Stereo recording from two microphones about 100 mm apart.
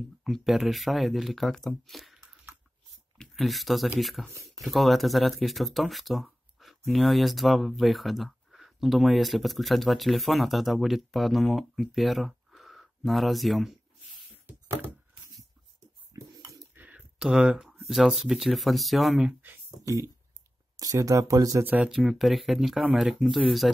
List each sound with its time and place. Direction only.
0.2 s speech: centre (ahead or behind)
1.9 s squish: centre (ahead or behind)
3.2 s speech: centre (ahead or behind)
16.1 s a sound: 35° right (ahead or behind)
16.7 s speech: 15° right (ahead or behind)
19.8 s speech: 30° right (ahead or behind)
21.6 s speech: 15° right (ahead or behind)
21.9 s speech: centre (ahead or behind)